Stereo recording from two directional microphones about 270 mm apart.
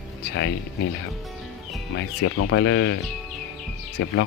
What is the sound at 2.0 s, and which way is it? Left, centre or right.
Speech, left.